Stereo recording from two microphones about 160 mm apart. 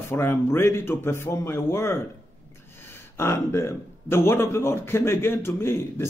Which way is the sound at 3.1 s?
15° left (ahead or behind).